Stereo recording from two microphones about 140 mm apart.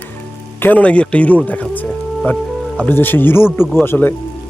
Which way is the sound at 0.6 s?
10° left (ahead or behind).